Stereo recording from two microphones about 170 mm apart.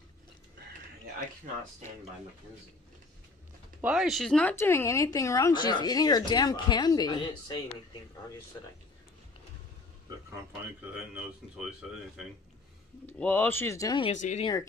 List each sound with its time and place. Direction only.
3.8 s speech: 5° right (ahead or behind); by 7.5 s 25° left (ahead or behind)
13.0 s speech: 10° left (ahead or behind)
14.0 s speech: 45° left (ahead or behind)
14.4 s speech: 20° left (ahead or behind)